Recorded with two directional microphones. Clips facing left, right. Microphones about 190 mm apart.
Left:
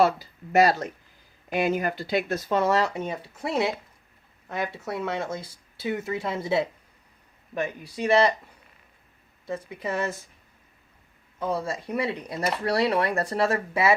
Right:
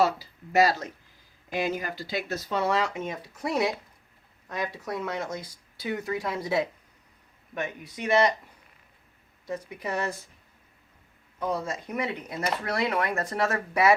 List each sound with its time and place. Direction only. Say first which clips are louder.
0.0 s speech: left 3 dB; 50° left (ahead or behind); by 8.3 s 30° left (ahead or behind)
9.5 s speech: left 2 dB; 25° left (ahead or behind)
11.6 s speech: left 3 dB; 30° left (ahead or behind)